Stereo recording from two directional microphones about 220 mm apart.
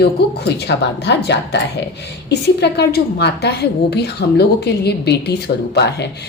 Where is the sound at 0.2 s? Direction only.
45° left (ahead or behind).